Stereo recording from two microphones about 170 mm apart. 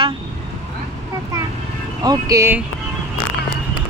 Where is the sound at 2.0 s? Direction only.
20° right (ahead or behind).